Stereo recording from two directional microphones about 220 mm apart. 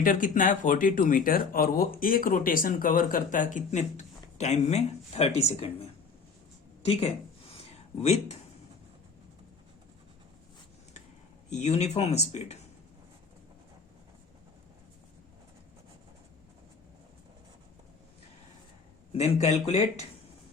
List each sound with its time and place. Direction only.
0.0 s speech: 40° left (ahead or behind)
6.8 s speech: 30° left (ahead or behind)
11.4 s speech: 30° left (ahead or behind)
19.1 s speech: 30° left (ahead or behind)